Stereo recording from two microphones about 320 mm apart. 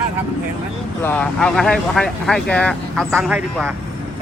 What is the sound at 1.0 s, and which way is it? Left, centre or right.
Speech, centre.